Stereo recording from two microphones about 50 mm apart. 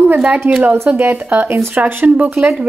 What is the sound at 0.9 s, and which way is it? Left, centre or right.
Speech, right.